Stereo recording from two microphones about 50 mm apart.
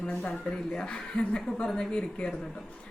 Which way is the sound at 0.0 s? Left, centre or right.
Left.